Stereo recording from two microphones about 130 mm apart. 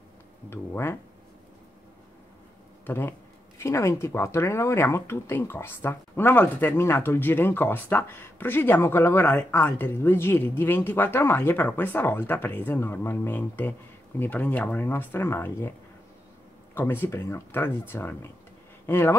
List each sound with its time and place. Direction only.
0.5 s speech: 20° left (ahead or behind)
2.9 s speech: 15° left (ahead or behind)
16.7 s speech: 15° left (ahead or behind)